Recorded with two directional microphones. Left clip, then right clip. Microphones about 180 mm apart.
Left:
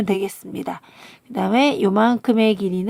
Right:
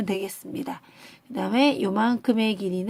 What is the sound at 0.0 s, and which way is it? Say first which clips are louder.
Speech: left 7 dB; 30° left (ahead or behind).